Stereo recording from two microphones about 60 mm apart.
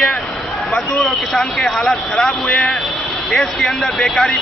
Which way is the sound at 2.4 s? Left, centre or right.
Left.